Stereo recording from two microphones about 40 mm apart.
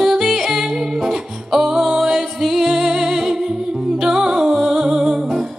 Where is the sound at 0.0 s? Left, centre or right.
Centre.